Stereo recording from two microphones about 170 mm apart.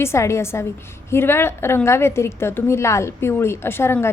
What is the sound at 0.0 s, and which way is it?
A woman's voice, 15° left (ahead or behind).